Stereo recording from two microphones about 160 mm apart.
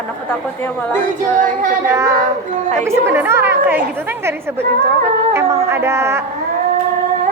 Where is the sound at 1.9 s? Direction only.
20° right (ahead or behind).